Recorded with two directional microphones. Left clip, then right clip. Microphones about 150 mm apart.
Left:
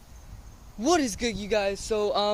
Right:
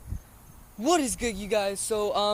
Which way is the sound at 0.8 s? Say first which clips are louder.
Left 1 dB; 10° left (ahead or behind).